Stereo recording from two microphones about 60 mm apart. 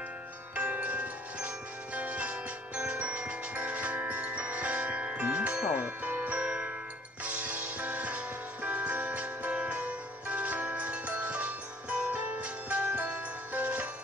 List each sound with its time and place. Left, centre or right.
0.6 s music: right